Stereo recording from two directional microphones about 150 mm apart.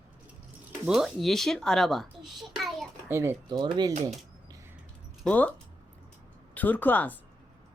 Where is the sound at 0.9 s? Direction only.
Centre (ahead or behind).